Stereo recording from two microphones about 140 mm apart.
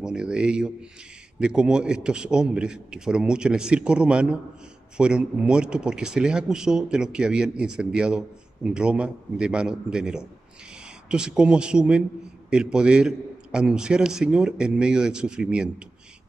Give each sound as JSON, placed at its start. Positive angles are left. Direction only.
{"t": 0.0, "sound": "a man's voice", "side_deg": -5}